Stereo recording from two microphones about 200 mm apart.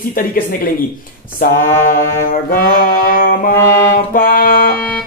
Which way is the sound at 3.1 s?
45° left (ahead or behind).